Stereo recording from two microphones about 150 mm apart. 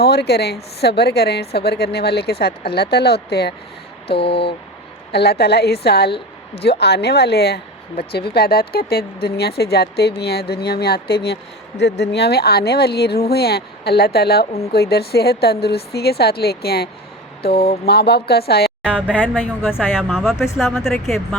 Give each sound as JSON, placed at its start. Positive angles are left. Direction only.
{"t": 0.0, "sound": "speech", "side_deg": 90}
{"t": 4.2, "sound": "a sound", "side_deg": 40}
{"t": 5.1, "sound": "speech", "side_deg": 90}
{"t": 17.5, "sound": "a sound", "side_deg": 40}
{"t": 17.8, "sound": "speech", "side_deg": 90}
{"t": 19.4, "sound": "a woman's voice", "side_deg": 15}
{"t": 20.0, "sound": "speech", "side_deg": -5}